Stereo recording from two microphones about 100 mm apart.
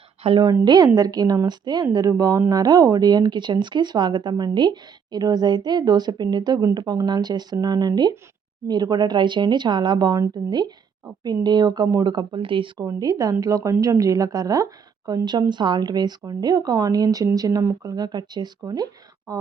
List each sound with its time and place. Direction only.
0.2 s a woman's voice: 80° right
0.6 s speech: 45° right (ahead or behind)
12.8 s speech: 35° right (ahead or behind)